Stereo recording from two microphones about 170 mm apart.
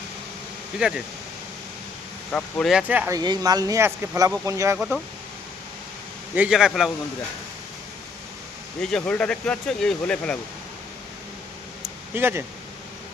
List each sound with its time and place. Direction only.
0.8 s speech: 5° right (ahead or behind)
2.3 s speech: centre (ahead or behind)
3.2 s speech: 25° right (ahead or behind)
6.3 s speech: 5° right (ahead or behind)
8.8 s speech: 5° left (ahead or behind)
12.1 s speech: 15° right (ahead or behind)